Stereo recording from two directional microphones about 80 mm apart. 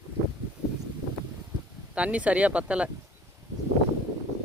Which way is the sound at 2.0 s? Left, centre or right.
Centre.